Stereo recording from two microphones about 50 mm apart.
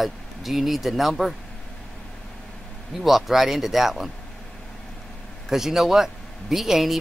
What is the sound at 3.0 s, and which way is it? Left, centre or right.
Speech, centre.